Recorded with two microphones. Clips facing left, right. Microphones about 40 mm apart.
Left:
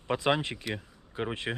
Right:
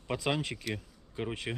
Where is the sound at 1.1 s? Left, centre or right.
Left.